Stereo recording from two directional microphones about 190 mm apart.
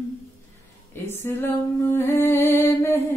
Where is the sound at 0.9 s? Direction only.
10° left (ahead or behind).